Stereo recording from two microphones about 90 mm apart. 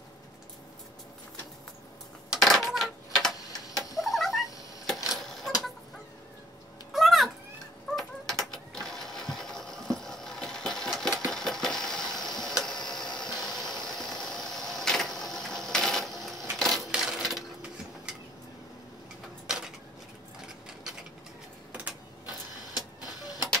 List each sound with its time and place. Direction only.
2.3 s tick-tock: centre (ahead or behind)
4.0 s cat: centre (ahead or behind)
5.1 s a sound: centre (ahead or behind)
6.9 s a sound: centre (ahead or behind)
12.8 s engine: 5° left (ahead or behind)
16.5 s coin: 5° left (ahead or behind)
16.9 s sewing machine: 5° right (ahead or behind)
23.2 s printer: 45° left (ahead or behind)